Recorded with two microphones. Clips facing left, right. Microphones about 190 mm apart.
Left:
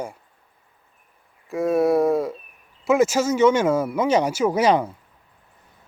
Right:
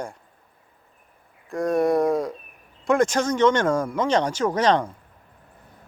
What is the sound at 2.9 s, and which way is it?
Speech, 5° left (ahead or behind).